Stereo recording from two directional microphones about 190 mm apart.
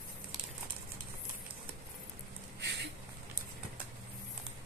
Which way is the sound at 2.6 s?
65° right (ahead or behind).